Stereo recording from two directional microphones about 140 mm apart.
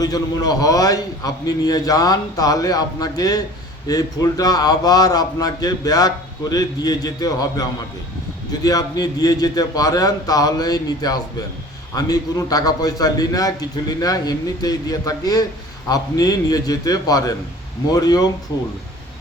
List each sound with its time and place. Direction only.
0.0 s a man's voice: 25° left (ahead or behind)